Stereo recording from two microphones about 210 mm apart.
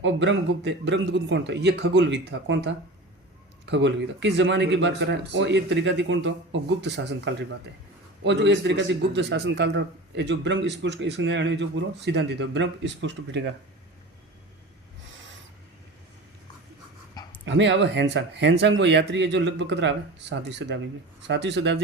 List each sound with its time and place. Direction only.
0.0 s a man's voice: 60° right (ahead or behind)
17.4 s a man's voice: 60° right (ahead or behind)